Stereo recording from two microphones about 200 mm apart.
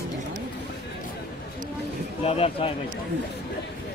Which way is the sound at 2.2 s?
30° left (ahead or behind).